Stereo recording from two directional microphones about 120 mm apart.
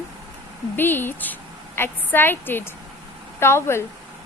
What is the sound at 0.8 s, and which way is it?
A woman's voice, 15° left (ahead or behind).